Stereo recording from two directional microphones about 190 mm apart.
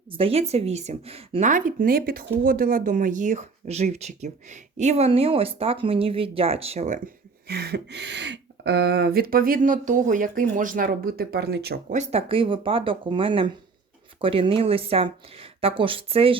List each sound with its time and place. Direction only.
0.1 s a woman's voice: 30° right (ahead or behind); by 11.9 s 55° right (ahead or behind)
11.9 s speech: 35° right (ahead or behind)